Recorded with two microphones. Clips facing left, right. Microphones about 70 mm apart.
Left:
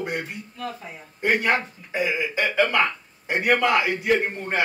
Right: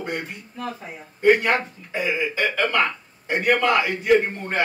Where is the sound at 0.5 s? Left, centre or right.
Centre.